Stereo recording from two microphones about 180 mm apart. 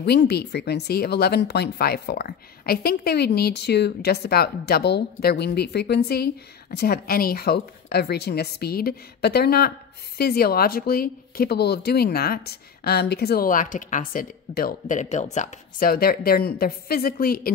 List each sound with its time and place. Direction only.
0.0 s speech: 65° left (ahead or behind); by 15.9 s 40° left (ahead or behind)
15.9 s speech: 55° left (ahead or behind)